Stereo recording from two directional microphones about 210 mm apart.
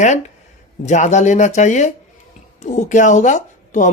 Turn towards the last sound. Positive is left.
turn(degrees=35)  # may be behind; listen again after turning